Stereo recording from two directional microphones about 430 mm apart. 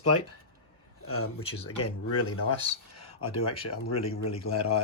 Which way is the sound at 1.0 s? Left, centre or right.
Left.